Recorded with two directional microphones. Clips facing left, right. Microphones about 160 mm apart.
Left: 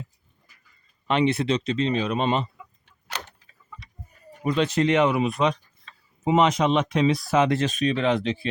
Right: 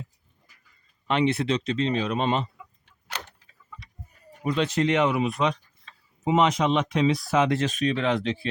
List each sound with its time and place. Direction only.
1.0 s speech: 20° left (ahead or behind)
4.4 s speech: 40° left (ahead or behind); by 7.2 s 60° left (ahead or behind)
7.3 s speech: 35° left (ahead or behind); by 8.4 s 15° left (ahead or behind)